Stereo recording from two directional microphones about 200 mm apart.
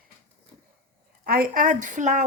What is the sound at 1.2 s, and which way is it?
Speech, 45° right (ahead or behind).